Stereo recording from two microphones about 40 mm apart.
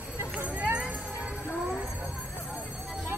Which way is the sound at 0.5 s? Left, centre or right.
Right.